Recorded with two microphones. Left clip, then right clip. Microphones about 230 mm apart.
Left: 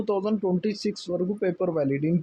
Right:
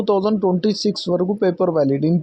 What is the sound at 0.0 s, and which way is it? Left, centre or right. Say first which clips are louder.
Speech: right 8 dB; right.